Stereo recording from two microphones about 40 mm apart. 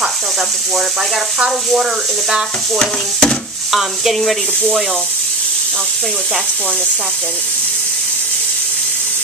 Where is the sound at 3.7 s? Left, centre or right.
Centre.